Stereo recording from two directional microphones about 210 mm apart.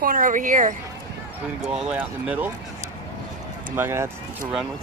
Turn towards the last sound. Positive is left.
turn(degrees=-10)  # may be behind; listen again after turning